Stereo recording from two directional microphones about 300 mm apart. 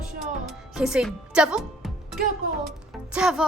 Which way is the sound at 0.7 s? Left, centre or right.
Centre.